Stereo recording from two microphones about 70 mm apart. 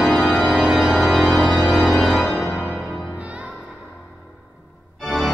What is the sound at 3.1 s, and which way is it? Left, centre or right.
Music, centre.